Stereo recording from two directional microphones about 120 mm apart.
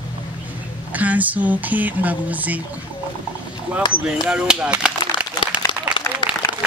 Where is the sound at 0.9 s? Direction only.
15° right (ahead or behind).